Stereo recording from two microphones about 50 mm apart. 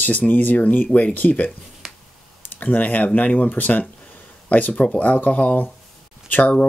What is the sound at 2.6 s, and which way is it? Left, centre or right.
Speech, left.